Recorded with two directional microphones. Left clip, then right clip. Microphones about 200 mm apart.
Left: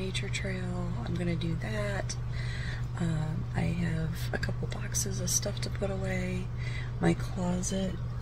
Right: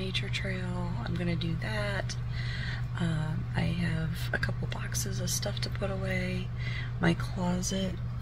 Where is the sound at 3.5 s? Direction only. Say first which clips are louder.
Right 1 dB; 10° left (ahead or behind).